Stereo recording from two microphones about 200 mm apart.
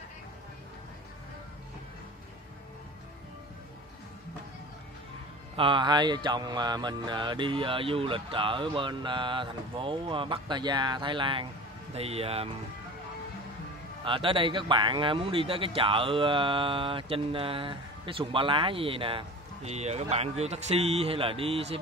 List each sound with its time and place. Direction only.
5.6 s a man's voice: 25° right (ahead or behind)
14.0 s a man's voice: 25° right (ahead or behind)